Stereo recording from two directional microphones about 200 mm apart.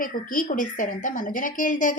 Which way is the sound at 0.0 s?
40° left (ahead or behind).